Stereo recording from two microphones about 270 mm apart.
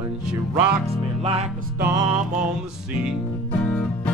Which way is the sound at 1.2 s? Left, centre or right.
Right.